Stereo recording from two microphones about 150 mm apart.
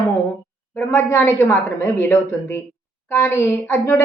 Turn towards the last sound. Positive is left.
turn(degrees=15)  # may be behind; listen again after turning